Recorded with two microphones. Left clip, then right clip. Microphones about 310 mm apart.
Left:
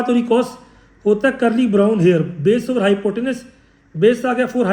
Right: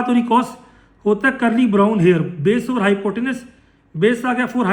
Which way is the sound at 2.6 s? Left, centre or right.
Right.